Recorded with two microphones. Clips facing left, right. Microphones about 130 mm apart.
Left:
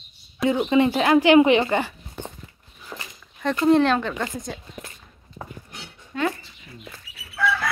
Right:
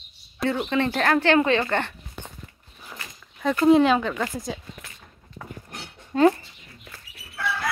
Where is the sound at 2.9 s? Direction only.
25° left (ahead or behind).